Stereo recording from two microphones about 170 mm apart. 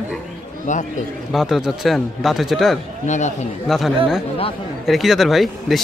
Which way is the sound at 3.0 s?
45° left (ahead or behind).